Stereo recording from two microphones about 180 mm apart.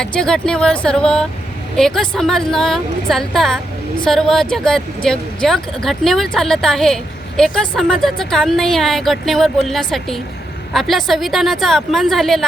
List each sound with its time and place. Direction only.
0.0 s speech: 5° left (ahead or behind)